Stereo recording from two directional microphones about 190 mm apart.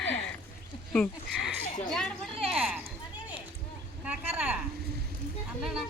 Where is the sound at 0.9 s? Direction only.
Centre (ahead or behind).